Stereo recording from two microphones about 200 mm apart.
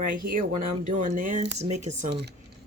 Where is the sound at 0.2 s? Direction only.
45° right (ahead or behind).